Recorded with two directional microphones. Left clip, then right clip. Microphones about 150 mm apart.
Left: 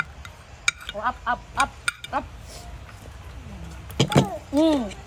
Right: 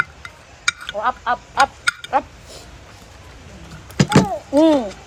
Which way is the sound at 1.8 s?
45° right (ahead or behind).